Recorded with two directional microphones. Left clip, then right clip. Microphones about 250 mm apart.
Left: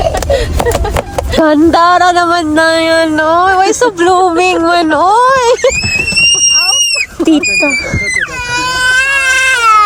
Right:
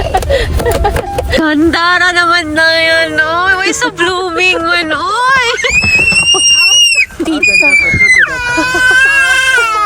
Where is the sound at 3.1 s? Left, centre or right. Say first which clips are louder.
Left 2 dB; left.